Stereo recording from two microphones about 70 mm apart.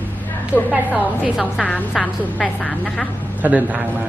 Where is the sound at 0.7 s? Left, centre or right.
Centre.